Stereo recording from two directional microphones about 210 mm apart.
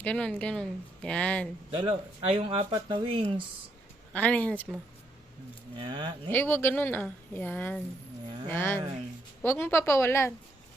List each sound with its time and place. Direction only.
0.0 s speech: 5° left (ahead or behind)
1.7 s speech: 25° right (ahead or behind)
4.1 s a woman's voice: 5° left (ahead or behind)
5.7 s speech: 25° right (ahead or behind)
6.3 s a woman's voice: 10° left (ahead or behind)